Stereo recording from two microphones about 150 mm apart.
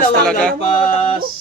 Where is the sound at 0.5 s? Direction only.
40° left (ahead or behind).